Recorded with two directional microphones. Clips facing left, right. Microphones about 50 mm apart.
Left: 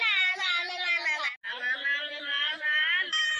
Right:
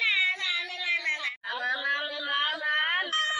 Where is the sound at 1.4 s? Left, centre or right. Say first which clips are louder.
Right 1 dB; left.